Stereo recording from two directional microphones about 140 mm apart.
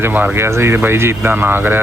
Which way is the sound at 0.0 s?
15° right (ahead or behind).